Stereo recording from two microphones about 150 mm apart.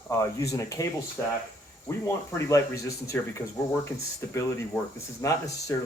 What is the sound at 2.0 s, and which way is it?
Speech, 20° left (ahead or behind).